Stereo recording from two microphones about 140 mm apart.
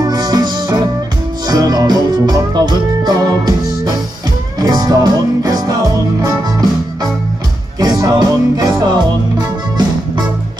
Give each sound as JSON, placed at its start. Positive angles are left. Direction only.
{"t": 0.0, "sound": "music", "side_deg": -30}
{"t": 7.8, "sound": "music", "side_deg": -30}